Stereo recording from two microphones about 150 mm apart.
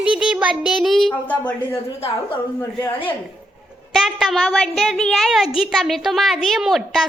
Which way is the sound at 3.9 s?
Centre (ahead or behind).